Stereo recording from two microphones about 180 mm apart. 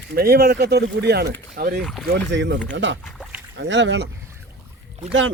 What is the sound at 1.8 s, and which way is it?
Speech, centre (ahead or behind).